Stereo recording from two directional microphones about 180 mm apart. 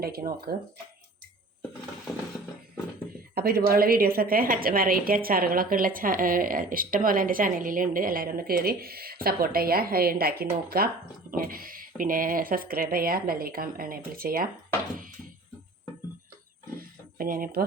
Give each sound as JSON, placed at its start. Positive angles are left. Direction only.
{"t": 0.0, "sound": "speech", "side_deg": -55}
{"t": 3.3, "sound": "a woman's voice", "side_deg": -60}
{"t": 16.7, "sound": "a sound", "side_deg": -50}